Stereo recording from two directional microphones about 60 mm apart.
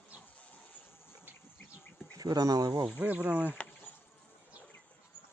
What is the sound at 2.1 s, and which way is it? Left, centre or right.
Speech, right.